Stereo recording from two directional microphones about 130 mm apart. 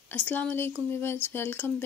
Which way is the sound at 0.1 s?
10° left (ahead or behind).